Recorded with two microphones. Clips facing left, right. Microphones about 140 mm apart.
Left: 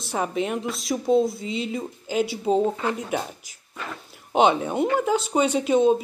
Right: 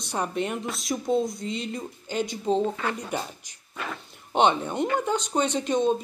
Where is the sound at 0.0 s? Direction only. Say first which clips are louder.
Left 3 dB; 5° left (ahead or behind).